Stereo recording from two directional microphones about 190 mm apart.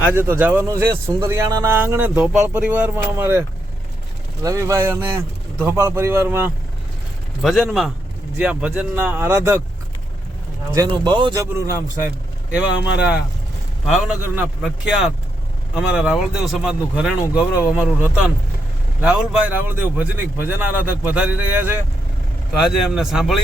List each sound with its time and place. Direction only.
0.0 s speech: 10° right (ahead or behind)
4.4 s speech: 15° right (ahead or behind)
7.4 s speech: centre (ahead or behind)
10.8 s speech: 25° right (ahead or behind); by 17.7 s 5° right (ahead or behind)
19.0 s speech: 10° right (ahead or behind)